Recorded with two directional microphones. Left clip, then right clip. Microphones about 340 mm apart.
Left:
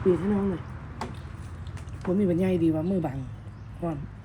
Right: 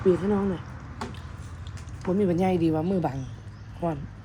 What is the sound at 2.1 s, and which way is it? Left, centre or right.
Speech, centre.